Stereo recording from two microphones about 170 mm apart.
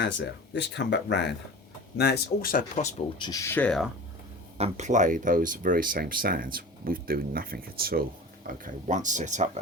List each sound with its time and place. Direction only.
0.0 s speech: 90° left
2.0 s speech: 75° left (ahead or behind); by 2.9 s 50° left (ahead or behind)
3.2 s speech: 20° left (ahead or behind); by 3.8 s 5° left (ahead or behind)
4.5 s speech: 40° right (ahead or behind); by 8.0 s 60° right (ahead or behind)
8.4 s speech: 50° right (ahead or behind)